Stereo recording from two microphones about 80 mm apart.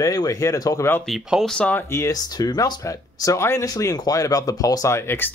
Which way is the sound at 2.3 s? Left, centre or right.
Left.